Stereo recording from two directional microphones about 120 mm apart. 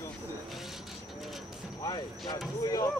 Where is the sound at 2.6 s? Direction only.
30° left (ahead or behind).